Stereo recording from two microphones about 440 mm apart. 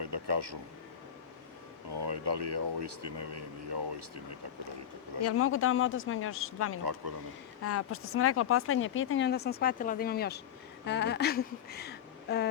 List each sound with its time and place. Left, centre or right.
0.0 s a sound: right
1.9 s speech: right
5.2 s speech: left